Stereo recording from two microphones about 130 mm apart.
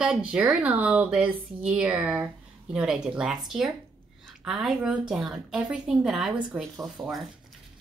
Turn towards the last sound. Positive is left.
turn(degrees=-40)  # may be behind; listen again after turning